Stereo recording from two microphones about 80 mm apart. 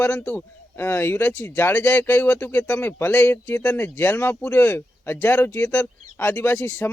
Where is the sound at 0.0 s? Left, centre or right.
Centre.